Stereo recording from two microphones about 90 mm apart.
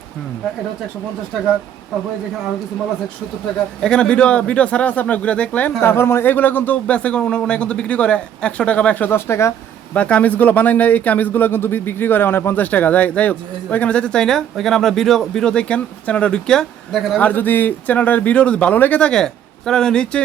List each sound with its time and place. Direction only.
3.8 s speech: 10° left (ahead or behind)
5.8 s speech: 25° left (ahead or behind)
9.9 s speech: 15° left (ahead or behind)
17.2 s speech: 20° left (ahead or behind)